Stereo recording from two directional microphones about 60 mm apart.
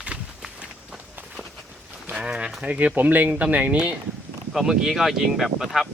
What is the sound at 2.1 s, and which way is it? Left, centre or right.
Speech, centre.